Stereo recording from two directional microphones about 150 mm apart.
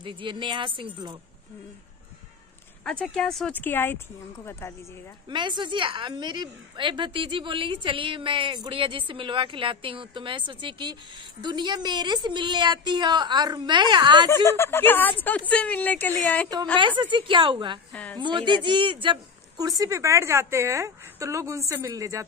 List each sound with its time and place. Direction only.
0.0 s a woman's voice: 35° right (ahead or behind)
2.8 s speech: 5° left (ahead or behind)
5.3 s a woman's voice: 30° right (ahead or behind)
14.4 s speech: 15° left (ahead or behind)
16.7 s a woman's voice: 35° right (ahead or behind)
17.9 s speech: 10° left (ahead or behind)
18.2 s a woman's voice: 30° right (ahead or behind)